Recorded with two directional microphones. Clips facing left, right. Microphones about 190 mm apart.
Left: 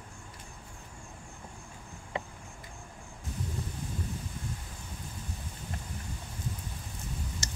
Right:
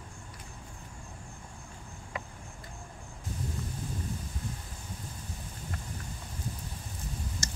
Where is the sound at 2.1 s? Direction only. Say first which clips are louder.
Left 4 dB; 25° left (ahead or behind).